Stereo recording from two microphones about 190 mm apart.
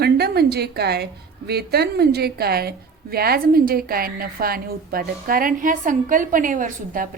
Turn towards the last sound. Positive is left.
turn(degrees=-45)  # may be behind; listen again after turning